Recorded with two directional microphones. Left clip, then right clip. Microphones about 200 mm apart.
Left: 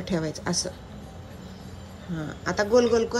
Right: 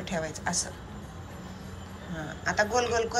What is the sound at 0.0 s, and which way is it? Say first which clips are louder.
Speech: left 2 dB; 25° left (ahead or behind).